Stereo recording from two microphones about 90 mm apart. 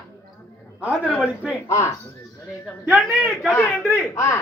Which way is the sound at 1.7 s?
35° left (ahead or behind).